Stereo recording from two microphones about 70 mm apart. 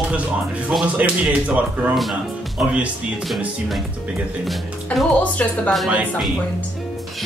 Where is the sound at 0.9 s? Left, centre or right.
Centre.